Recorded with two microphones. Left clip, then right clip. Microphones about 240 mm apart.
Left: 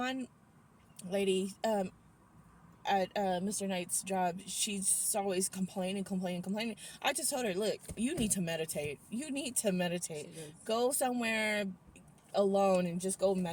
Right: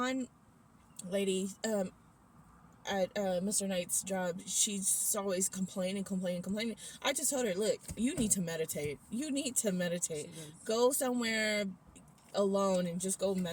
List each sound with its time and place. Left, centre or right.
1.1 s a woman's voice: centre
2.8 s a woman's voice: centre